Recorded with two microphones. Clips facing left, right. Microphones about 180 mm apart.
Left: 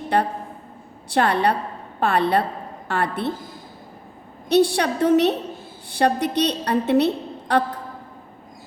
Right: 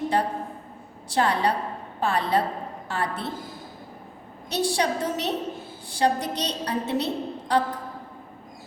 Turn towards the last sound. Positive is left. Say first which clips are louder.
# left 2 dB
turn(degrees=60)  # may be behind; listen again after turning